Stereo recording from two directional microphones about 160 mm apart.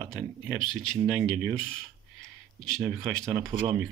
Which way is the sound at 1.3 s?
5° right (ahead or behind).